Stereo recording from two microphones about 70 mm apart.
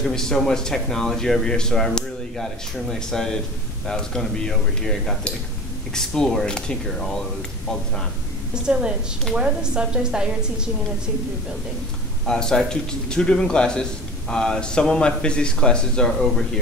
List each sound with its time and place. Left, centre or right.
0.0 s speech: centre
8.6 s a woman's voice: centre
12.3 s speech: centre